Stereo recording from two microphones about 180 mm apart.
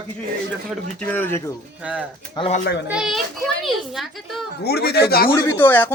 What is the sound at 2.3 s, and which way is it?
Speech, 30° left (ahead or behind).